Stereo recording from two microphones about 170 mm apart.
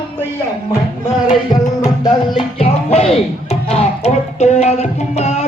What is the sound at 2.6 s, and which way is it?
Speech, 35° left (ahead or behind).